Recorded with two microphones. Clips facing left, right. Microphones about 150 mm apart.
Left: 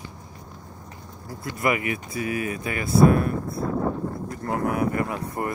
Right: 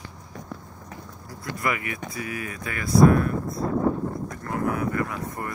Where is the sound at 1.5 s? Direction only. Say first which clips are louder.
Left 4 dB; 20° left (ahead or behind).